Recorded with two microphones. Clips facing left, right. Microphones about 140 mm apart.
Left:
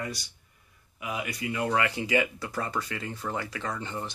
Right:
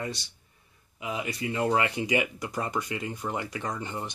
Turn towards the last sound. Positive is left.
turn(degrees=-15)  # may be behind; listen again after turning